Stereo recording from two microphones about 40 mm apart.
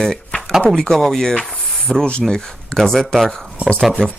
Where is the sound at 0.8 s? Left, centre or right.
Centre.